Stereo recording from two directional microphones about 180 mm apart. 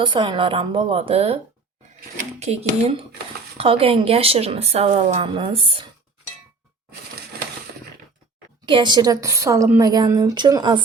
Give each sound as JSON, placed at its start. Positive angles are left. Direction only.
{"t": 0.0, "sound": "a woman's voice", "side_deg": -25}
{"t": 2.4, "sound": "a woman's voice", "side_deg": -35}
{"t": 8.6, "sound": "a woman's voice", "side_deg": -25}